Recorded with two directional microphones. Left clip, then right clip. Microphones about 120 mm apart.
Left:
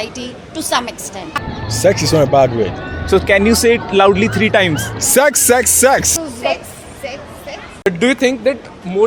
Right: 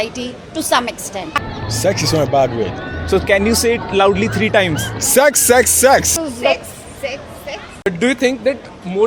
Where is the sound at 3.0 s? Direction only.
35° left (ahead or behind).